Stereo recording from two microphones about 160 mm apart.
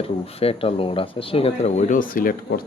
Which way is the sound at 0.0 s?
35° left (ahead or behind).